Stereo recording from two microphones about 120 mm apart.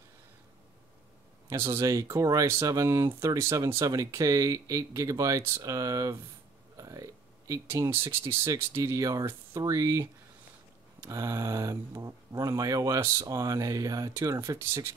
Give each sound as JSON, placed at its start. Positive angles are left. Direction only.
{"t": 1.5, "sound": "speech", "side_deg": -20}